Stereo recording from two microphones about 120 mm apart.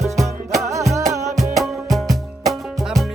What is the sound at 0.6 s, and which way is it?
Music, 25° right (ahead or behind).